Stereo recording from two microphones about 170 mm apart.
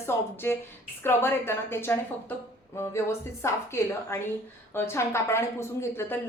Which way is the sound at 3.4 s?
15° left (ahead or behind).